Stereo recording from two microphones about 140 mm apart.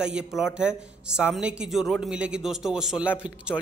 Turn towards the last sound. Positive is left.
turn(degrees=-10)  # may be behind; listen again after turning